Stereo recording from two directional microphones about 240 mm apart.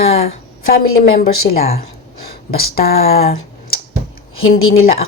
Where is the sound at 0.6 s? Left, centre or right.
Left.